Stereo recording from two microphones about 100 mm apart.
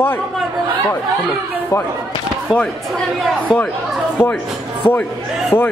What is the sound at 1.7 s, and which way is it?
Speech, 35° left (ahead or behind).